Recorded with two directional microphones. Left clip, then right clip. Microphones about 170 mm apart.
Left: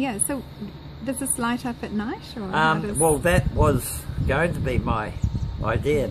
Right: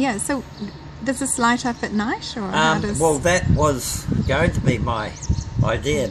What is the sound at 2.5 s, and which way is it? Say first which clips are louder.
Speech: right 2 dB; 5° right (ahead or behind).